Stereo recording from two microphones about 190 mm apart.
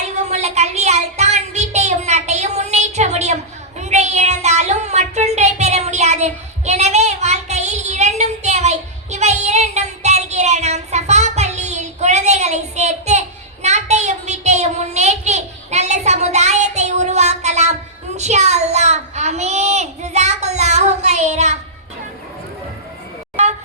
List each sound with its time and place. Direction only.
0.3 s child singing: 35° right (ahead or behind)